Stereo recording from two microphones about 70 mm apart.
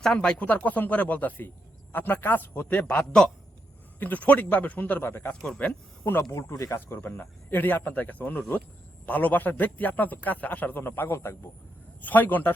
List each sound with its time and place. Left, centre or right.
0.0 s speech: centre; by 5.3 s left
5.5 s speech: left
6.3 s speech: left
12.0 s speech: left